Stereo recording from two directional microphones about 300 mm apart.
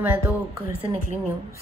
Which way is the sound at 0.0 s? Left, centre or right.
Centre.